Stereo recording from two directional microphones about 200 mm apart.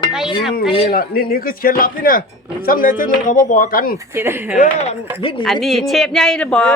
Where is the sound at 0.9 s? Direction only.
50° left (ahead or behind); by 5.4 s 25° left (ahead or behind).